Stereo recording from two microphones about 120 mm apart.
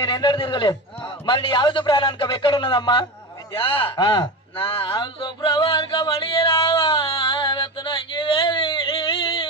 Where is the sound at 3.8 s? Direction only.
45° left (ahead or behind).